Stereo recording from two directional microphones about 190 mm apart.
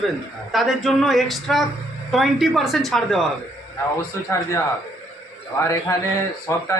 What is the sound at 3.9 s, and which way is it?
A man's voice, 15° left (ahead or behind).